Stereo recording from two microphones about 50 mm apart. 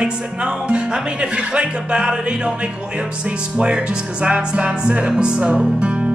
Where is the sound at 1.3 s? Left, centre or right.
Centre.